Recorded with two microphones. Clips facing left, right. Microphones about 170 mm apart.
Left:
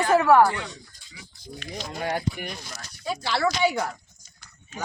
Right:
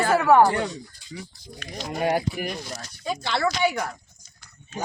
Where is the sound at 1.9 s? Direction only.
15° right (ahead or behind).